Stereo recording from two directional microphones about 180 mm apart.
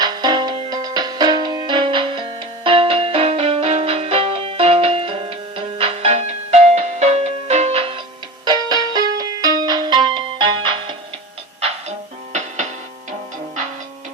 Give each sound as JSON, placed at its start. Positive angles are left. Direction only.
{"t": 0.0, "sound": "music", "side_deg": -25}
{"t": 8.4, "sound": "music", "side_deg": -20}
{"t": 11.6, "sound": "music", "side_deg": -40}